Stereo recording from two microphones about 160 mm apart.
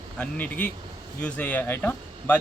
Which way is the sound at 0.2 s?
10° left (ahead or behind).